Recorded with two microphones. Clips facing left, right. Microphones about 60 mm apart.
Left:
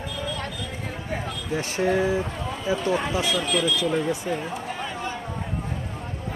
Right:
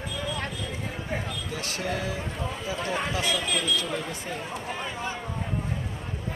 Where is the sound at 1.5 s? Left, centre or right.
Left.